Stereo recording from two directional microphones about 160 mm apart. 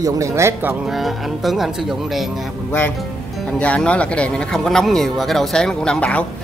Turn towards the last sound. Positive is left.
turn(degrees=5)  # may be behind; listen again after turning